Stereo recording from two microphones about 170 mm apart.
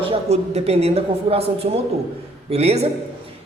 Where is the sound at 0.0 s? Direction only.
35° right (ahead or behind).